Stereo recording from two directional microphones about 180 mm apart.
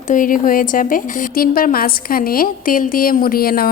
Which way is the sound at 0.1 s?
50° left (ahead or behind).